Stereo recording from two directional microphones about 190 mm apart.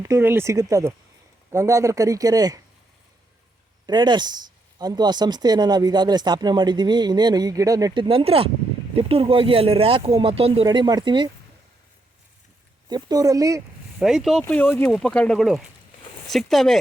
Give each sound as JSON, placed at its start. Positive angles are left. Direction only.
{"t": 0.0, "sound": "a man's voice", "side_deg": -15}
{"t": 3.8, "sound": "speech", "side_deg": -20}
{"t": 12.9, "sound": "speech", "side_deg": -20}
{"t": 14.0, "sound": "speech", "side_deg": 0}
{"t": 14.4, "sound": "speech", "side_deg": 10}